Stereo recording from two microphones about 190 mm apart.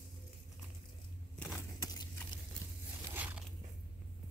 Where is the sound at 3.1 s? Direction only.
10° right (ahead or behind).